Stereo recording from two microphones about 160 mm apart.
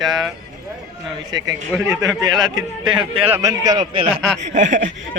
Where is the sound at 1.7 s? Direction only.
20° right (ahead or behind).